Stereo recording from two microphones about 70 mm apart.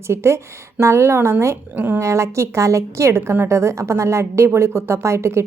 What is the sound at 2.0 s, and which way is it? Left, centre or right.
A woman's voice, right.